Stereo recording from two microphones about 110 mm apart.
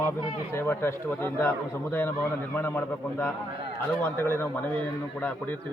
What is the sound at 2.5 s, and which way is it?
A man's voice, 20° left (ahead or behind).